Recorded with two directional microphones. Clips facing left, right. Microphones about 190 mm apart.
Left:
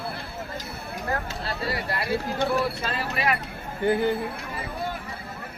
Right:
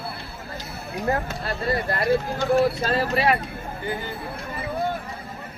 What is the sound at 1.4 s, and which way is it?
Speech, 50° right (ahead or behind).